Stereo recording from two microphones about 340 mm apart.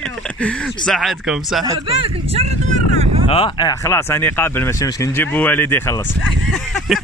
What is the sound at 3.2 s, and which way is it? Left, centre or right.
Speech, centre.